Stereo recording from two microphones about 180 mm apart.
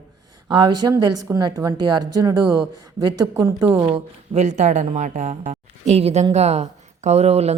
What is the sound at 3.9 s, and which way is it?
Speech, 35° right (ahead or behind).